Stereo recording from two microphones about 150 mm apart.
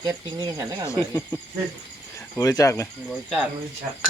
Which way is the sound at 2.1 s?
25° left (ahead or behind).